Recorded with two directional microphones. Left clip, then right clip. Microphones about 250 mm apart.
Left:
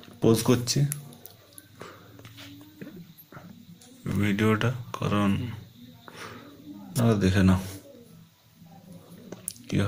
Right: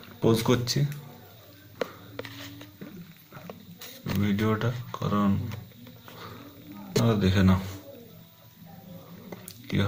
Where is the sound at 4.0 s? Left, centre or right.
Centre.